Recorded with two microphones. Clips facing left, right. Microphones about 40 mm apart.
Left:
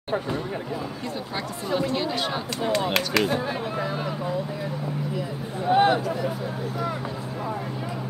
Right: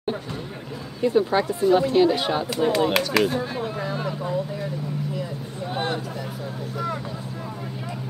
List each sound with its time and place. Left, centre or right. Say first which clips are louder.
1.0 s speech: right 11 dB; centre
1.6 s speech: right 7 dB; centre
5.7 s speech: left 9 dB; centre